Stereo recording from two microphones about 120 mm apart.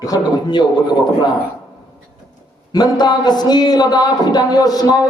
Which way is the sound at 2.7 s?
35° left (ahead or behind).